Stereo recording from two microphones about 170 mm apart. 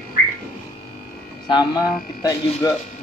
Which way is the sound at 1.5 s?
25° left (ahead or behind).